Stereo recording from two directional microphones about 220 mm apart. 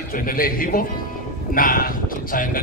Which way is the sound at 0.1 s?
40° left (ahead or behind).